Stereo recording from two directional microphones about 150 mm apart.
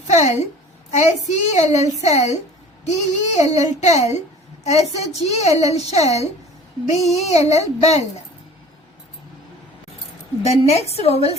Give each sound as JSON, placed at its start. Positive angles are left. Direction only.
{"t": 0.1, "sound": "a woman's voice", "side_deg": 50}
{"t": 10.4, "sound": "a woman's voice", "side_deg": 45}